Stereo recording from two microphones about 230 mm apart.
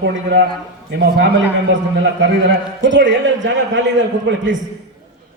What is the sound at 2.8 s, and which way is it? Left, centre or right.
A man's voice, right.